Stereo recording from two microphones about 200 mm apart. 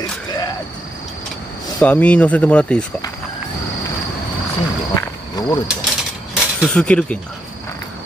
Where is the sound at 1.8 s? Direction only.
5° left (ahead or behind).